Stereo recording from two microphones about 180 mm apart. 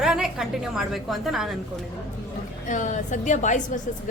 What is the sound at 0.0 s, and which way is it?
A woman's voice, centre (ahead or behind).